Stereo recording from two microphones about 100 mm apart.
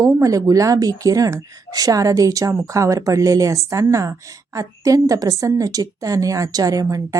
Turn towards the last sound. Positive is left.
turn(degrees=-35)  # may be behind; listen again after turning